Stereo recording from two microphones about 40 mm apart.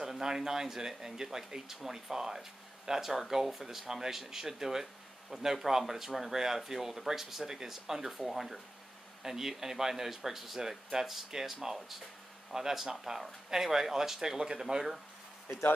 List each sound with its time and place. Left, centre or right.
0.2 s speech: centre
15.5 s speech: left